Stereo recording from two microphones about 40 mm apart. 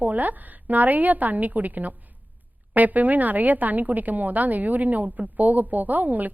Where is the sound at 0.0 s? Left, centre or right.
Right.